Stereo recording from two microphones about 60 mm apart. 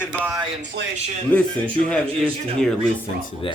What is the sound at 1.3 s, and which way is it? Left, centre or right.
Speech, left.